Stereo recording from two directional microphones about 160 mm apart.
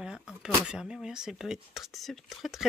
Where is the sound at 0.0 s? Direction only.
5° right (ahead or behind).